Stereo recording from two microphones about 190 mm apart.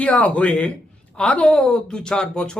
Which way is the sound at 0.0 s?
5° left (ahead or behind).